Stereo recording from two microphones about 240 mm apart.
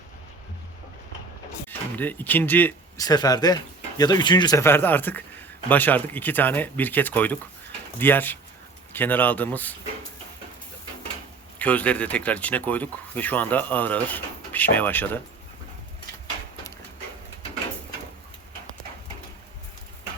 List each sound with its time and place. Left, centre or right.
2.0 s speech: centre
11.6 s speech: centre